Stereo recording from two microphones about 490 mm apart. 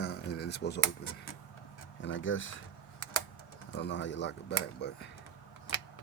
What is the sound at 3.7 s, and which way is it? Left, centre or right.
Speech, left.